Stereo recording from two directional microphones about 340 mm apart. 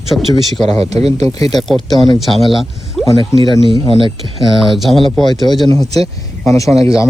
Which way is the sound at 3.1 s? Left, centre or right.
Centre.